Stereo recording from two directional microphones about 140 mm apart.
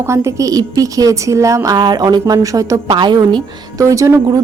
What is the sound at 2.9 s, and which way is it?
Speech, 35° right (ahead or behind).